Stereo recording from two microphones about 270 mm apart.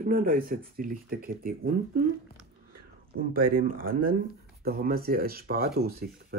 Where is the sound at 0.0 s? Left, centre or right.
Right.